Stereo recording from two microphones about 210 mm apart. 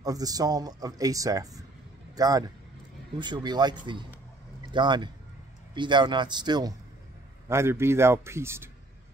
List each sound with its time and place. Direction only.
0.0 s a man's voice: 15° right (ahead or behind)
4.7 s speech: 20° right (ahead or behind)